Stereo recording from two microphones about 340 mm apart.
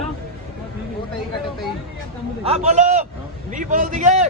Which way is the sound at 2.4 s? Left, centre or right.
Centre.